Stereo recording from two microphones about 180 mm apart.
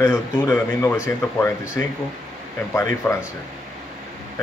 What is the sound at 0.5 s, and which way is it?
Speech, 10° left (ahead or behind).